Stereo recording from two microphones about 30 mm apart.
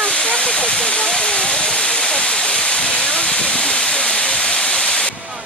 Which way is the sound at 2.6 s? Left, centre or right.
Left.